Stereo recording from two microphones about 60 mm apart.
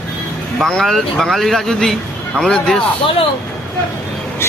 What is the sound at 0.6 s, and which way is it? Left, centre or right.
Speech, centre.